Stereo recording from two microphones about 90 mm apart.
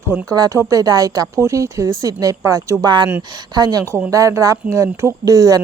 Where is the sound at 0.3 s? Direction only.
45° right (ahead or behind).